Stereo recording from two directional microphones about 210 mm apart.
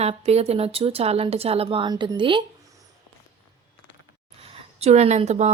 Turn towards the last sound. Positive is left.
turn(degrees=-30)  # may be behind; listen again after turning